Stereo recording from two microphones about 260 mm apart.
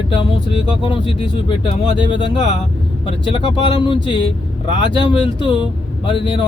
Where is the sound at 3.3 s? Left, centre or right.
Centre.